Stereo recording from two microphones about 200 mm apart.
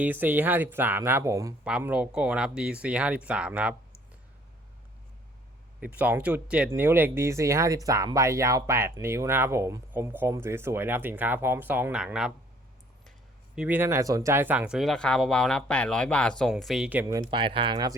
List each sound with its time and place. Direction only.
0.0 s speech: 10° right (ahead or behind)
5.8 s speech: 10° right (ahead or behind)
13.6 s speech: 10° right (ahead or behind)